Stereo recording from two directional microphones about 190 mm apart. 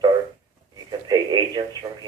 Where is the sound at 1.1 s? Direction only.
20° right (ahead or behind).